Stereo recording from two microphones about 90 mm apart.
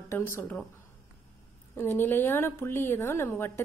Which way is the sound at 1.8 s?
25° left (ahead or behind).